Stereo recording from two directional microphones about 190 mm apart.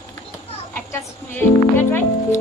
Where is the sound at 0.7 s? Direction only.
10° left (ahead or behind).